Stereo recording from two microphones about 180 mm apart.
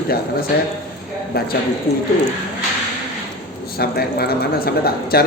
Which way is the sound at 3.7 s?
60° left (ahead or behind).